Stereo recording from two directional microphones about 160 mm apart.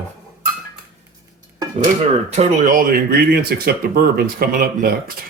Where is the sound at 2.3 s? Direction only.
45° right (ahead or behind).